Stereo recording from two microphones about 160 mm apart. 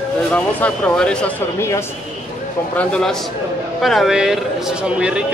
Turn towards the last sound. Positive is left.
turn(degrees=-5)  # may be behind; listen again after turning